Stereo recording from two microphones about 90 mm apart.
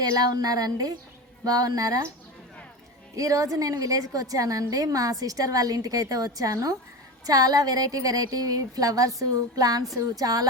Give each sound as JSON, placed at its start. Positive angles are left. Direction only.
{"t": 0.0, "sound": "a woman's voice", "side_deg": -50}
{"t": 3.2, "sound": "a woman's voice", "side_deg": -40}